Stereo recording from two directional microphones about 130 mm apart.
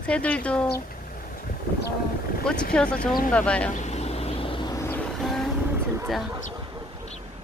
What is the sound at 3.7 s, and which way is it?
Vehicle, 60° left (ahead or behind).